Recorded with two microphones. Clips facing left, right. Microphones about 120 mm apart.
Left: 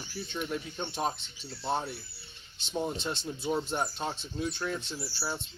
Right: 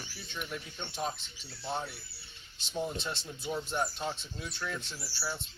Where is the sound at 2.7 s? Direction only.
35° left (ahead or behind).